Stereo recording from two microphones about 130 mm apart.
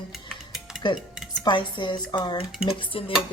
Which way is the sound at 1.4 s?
35° left (ahead or behind).